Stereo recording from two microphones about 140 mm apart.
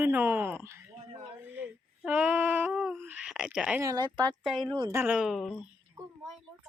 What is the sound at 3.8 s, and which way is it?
Speech, 25° right (ahead or behind).